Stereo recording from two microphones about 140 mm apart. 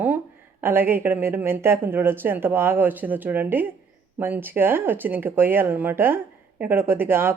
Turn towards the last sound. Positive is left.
turn(degrees=-15)  # may be behind; listen again after turning